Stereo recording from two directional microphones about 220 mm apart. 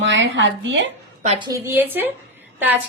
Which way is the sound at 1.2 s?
30° right (ahead or behind).